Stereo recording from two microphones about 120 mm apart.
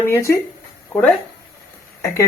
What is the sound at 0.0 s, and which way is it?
Speech, 20° left (ahead or behind).